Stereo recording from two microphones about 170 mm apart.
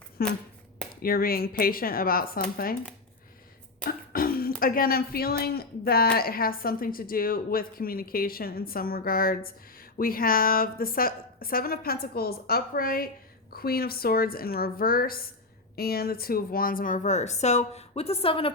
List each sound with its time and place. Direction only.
0.2 s a woman's voice: 65° left (ahead or behind)
3.8 s beatboxing: 60° left (ahead or behind)
4.6 s a woman's voice: 55° left (ahead or behind); by 18.5 s 35° left (ahead or behind)